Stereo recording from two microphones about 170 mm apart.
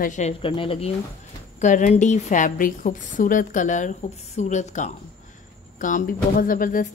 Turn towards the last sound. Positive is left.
turn(degrees=55)  # may be behind; listen again after turning